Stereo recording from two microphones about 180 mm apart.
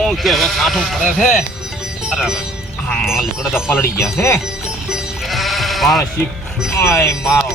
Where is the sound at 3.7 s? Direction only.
15° left (ahead or behind).